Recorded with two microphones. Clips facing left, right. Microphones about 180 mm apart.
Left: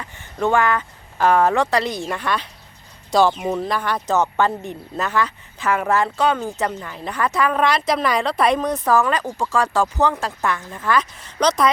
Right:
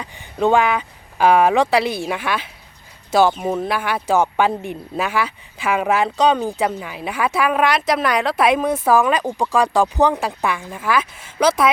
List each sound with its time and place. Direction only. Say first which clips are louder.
0.0 s a woman's voice: right 3 dB; 15° right (ahead or behind)